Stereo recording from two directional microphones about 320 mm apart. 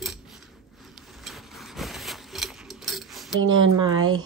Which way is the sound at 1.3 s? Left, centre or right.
Centre.